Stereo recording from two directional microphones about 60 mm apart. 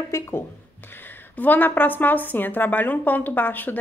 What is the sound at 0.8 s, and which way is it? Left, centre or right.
A woman's voice, left.